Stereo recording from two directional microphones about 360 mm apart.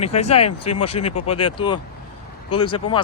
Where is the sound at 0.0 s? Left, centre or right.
Centre.